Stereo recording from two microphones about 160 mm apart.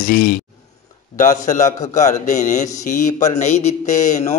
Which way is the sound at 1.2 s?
50° left (ahead or behind).